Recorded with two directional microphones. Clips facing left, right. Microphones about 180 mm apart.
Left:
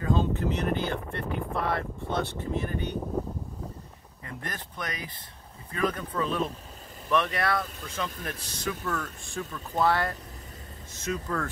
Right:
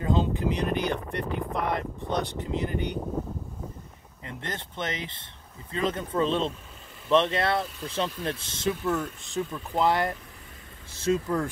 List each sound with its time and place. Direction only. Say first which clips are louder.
0.0 s speech: right 1 dB; 15° right (ahead or behind)
4.3 s speech: right 2 dB; 25° right (ahead or behind)
10.9 s speech: right 7 dB; 30° right (ahead or behind)